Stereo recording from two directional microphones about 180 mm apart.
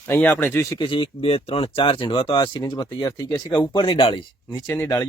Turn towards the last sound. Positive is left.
turn(degrees=15)  # may be behind; listen again after turning